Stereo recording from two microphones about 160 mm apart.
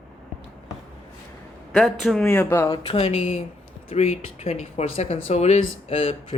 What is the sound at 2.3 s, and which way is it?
Speech, 15° left (ahead or behind).